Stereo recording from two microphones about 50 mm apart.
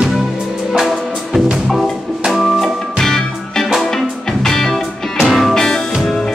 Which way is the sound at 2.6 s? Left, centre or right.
Centre.